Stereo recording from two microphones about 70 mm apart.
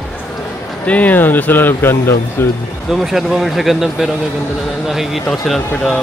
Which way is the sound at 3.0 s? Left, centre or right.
Centre.